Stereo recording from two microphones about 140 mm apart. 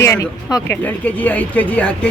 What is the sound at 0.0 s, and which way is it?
A woman's voice, 20° left (ahead or behind).